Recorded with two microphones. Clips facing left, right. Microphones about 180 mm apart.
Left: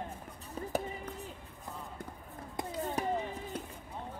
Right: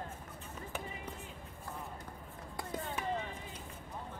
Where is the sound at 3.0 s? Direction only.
40° left (ahead or behind).